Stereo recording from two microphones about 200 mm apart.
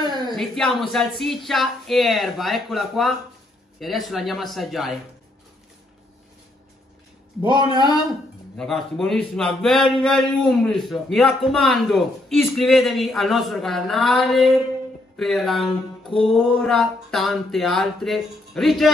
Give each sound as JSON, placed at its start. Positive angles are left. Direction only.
{"t": 0.0, "sound": "a sound", "side_deg": -20}
{"t": 0.3, "sound": "speech", "side_deg": 0}
{"t": 8.5, "sound": "speech", "side_deg": 0}